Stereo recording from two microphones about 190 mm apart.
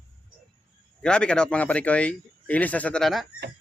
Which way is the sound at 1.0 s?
5° left (ahead or behind).